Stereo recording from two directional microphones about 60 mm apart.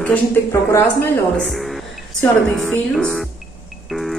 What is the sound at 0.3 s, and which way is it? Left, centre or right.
Speech, left.